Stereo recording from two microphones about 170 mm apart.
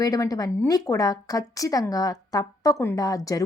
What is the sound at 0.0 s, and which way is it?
Speech, 20° left (ahead or behind).